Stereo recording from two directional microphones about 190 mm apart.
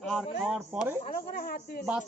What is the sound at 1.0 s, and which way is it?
Speech, 50° left (ahead or behind).